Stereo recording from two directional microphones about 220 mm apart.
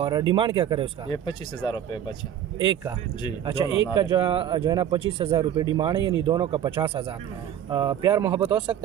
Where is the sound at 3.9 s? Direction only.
20° right (ahead or behind).